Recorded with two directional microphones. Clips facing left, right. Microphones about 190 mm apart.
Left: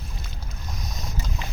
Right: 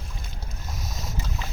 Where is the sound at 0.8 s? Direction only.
5° right (ahead or behind).